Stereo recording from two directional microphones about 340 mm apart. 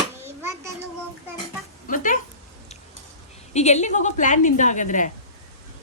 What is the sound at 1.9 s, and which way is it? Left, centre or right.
Speech, left.